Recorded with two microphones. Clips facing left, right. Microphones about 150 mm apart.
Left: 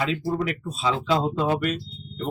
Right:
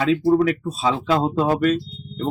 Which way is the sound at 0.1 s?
40° right (ahead or behind).